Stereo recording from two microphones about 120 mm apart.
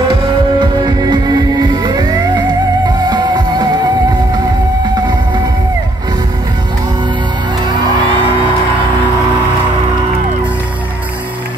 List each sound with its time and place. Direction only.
0.1 s music: 40° right (ahead or behind)